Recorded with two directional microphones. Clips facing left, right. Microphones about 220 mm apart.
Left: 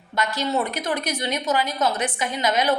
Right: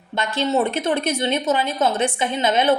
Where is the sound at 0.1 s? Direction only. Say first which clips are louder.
Right 3 dB; 25° right (ahead or behind).